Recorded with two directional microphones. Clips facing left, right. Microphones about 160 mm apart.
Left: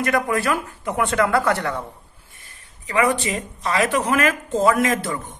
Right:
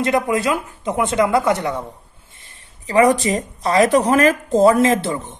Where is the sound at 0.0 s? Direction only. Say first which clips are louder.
Right 3 dB; 20° right (ahead or behind).